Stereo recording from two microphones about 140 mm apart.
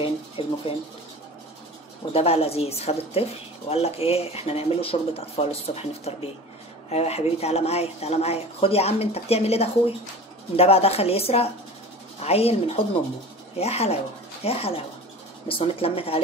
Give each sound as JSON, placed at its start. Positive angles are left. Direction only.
{"t": 0.0, "sound": "speech", "side_deg": 40}
{"t": 2.1, "sound": "speech", "side_deg": 45}